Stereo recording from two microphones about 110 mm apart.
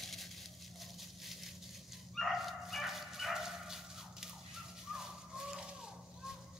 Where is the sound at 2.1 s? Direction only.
Centre (ahead or behind).